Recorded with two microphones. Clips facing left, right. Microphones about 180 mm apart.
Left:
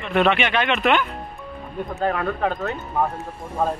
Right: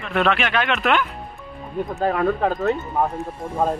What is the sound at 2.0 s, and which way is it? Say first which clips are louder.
Speech: right 3 dB; 20° right (ahead or behind).